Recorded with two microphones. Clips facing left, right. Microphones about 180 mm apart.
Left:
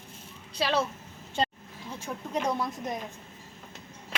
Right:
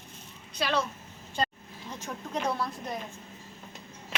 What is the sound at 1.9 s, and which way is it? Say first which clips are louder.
Speech: left 2 dB; 10° left (ahead or behind).